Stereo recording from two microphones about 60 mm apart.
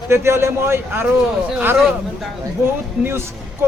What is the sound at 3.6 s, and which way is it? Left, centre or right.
Speech, right.